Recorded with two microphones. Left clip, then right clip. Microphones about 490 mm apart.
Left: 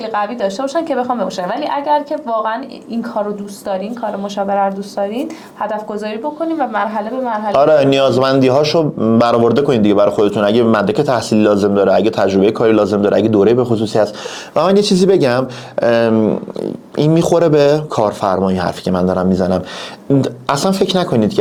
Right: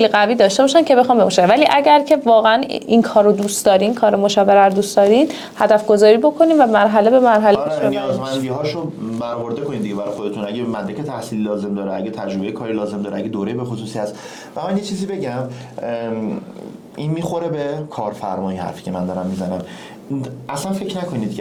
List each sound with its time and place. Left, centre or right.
0.0 s speech: right
7.9 s a man's voice: left
20.2 s a man's voice: left